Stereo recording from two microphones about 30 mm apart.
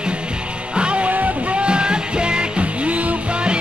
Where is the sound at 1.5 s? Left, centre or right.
Right.